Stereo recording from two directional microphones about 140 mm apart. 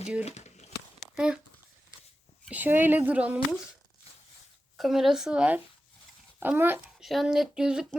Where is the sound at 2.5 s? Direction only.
15° right (ahead or behind).